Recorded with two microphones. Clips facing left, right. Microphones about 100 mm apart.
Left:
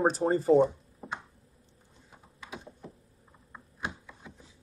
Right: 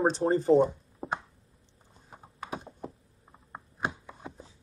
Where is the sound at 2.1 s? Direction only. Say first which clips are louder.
Right 7 dB; 45° right (ahead or behind).